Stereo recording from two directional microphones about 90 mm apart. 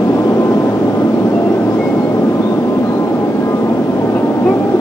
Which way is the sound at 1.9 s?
30° left (ahead or behind).